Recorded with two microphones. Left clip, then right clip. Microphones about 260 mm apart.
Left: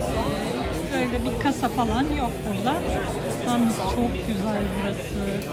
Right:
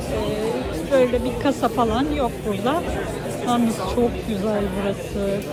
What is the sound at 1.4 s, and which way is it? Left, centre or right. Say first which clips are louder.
Speech: right 3 dB; centre.